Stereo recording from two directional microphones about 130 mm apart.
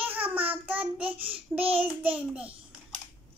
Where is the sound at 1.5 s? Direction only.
10° right (ahead or behind).